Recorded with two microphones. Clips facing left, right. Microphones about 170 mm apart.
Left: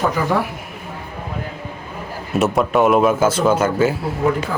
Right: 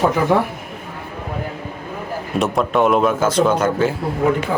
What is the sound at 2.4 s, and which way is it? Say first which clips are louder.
Speech: left 1 dB; 5° left (ahead or behind).